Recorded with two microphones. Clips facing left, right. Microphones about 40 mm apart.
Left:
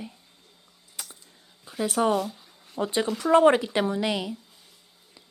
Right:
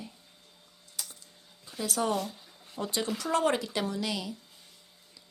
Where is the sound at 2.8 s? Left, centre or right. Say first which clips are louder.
Left 6 dB; left.